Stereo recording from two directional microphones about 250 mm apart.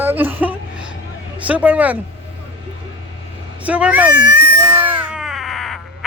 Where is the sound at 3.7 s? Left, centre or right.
Centre.